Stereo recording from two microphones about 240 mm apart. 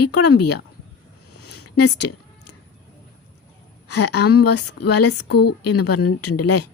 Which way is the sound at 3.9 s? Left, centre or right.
Left.